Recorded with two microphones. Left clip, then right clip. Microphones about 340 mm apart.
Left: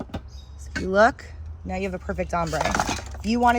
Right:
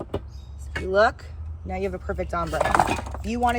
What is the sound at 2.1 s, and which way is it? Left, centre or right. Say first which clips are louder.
Speech: left 4 dB; left.